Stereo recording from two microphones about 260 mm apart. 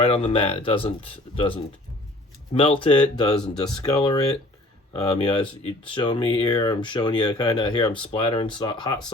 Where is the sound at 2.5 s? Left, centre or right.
Left.